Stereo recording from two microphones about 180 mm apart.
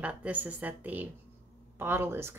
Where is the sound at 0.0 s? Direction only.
5° right (ahead or behind).